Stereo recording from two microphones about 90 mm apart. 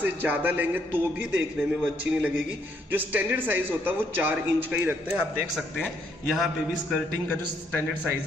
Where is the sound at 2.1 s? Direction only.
10° right (ahead or behind).